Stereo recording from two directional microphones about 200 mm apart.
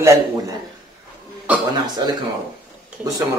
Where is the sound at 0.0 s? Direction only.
15° right (ahead or behind).